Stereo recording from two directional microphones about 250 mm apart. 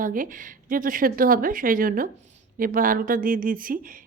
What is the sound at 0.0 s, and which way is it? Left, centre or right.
Speech, right.